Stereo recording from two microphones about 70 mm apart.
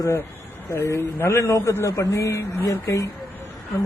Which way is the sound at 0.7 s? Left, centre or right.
Left.